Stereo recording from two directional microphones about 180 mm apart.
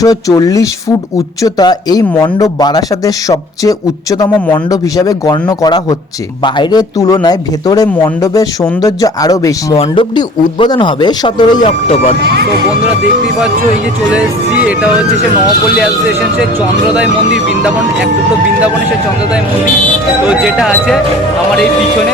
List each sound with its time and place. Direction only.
0.0 s speech: 20° left (ahead or behind)
9.7 s speech: 30° left (ahead or behind)
20.2 s speech: 5° right (ahead or behind)